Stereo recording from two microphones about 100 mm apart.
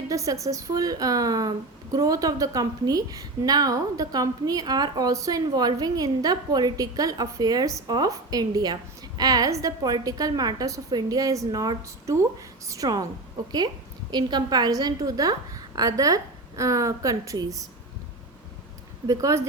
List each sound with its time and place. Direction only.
0.1 s a woman's voice: 35° right (ahead or behind)
14.1 s a woman's voice: 45° right (ahead or behind)
19.0 s a woman's voice: 35° right (ahead or behind)